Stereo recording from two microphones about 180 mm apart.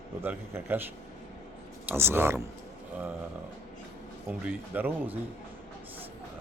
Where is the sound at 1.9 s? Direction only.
15° right (ahead or behind).